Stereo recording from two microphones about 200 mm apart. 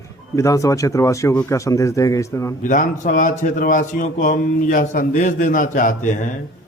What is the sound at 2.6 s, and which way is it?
A man's voice, 40° left (ahead or behind).